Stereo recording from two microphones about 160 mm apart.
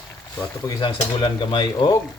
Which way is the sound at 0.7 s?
25° left (ahead or behind).